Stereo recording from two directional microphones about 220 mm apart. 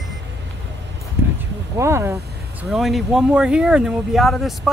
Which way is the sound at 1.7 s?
10° right (ahead or behind).